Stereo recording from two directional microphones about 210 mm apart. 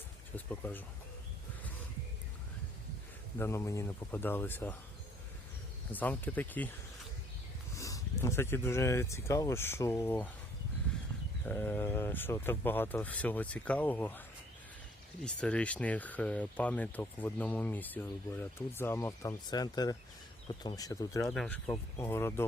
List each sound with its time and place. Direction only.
0.3 s speech: 10° left (ahead or behind)
3.3 s speech: 10° left (ahead or behind)
5.9 s speech: 10° left (ahead or behind)
7.8 s speech: 15° left (ahead or behind)
11.4 s speech: 5° left (ahead or behind)
15.2 s speech: 5° left (ahead or behind)
21.3 s speech: 5° left (ahead or behind)